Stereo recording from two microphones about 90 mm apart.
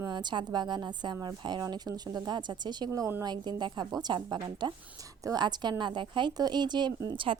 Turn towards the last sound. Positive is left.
turn(degrees=-80)